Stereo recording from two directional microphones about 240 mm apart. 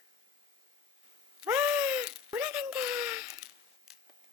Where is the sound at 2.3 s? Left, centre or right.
Centre.